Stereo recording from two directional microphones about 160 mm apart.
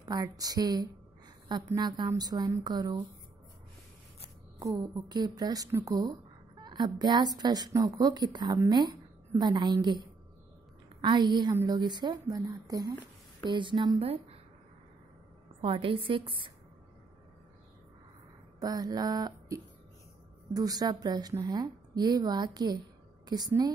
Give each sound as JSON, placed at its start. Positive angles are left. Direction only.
{"t": 0.1, "sound": "a woman's voice", "side_deg": -25}
{"t": 4.6, "sound": "a woman's voice", "side_deg": -20}
{"t": 15.6, "sound": "a woman's voice", "side_deg": -35}
{"t": 18.6, "sound": "a sound", "side_deg": -25}
{"t": 20.5, "sound": "a woman's voice", "side_deg": -25}